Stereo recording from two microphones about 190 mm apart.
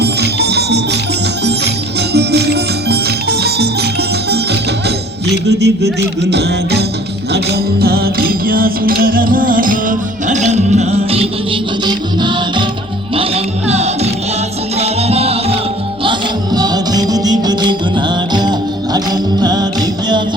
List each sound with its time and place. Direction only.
0.0 s music: 60° right (ahead or behind)
5.5 s music: 60° right (ahead or behind); by 15.5 s 30° right (ahead or behind)
16.0 s music: 20° right (ahead or behind)